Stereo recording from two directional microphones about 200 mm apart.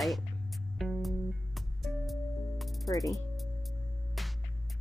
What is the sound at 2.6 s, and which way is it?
Ratchet, centre (ahead or behind).